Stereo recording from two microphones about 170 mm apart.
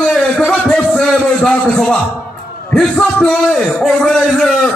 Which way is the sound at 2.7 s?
5° left (ahead or behind).